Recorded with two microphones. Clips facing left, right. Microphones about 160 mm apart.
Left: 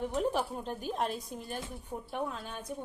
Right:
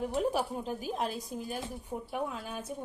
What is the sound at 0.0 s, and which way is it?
A woman's voice, 5° right (ahead or behind).